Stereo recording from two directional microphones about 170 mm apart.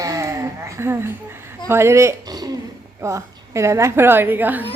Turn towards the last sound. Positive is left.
turn(degrees=-10)  # may be behind; listen again after turning